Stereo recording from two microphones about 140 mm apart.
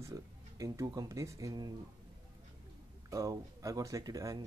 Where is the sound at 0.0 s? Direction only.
25° right (ahead or behind).